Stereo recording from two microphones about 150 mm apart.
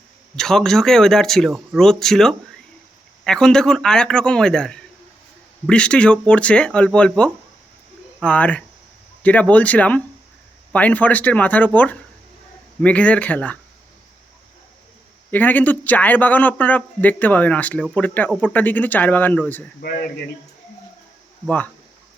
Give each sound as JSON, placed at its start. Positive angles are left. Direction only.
{"t": 0.3, "sound": "a man's voice", "side_deg": 5}
{"t": 15.3, "sound": "a man's voice", "side_deg": 10}
{"t": 19.8, "sound": "speech", "side_deg": 90}
{"t": 21.4, "sound": "a man's voice", "side_deg": 10}